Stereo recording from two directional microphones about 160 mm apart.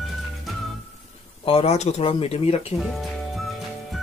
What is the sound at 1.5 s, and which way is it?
Speech, 40° left (ahead or behind).